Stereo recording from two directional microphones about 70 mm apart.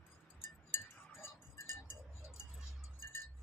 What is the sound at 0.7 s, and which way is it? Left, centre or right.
Chink, left.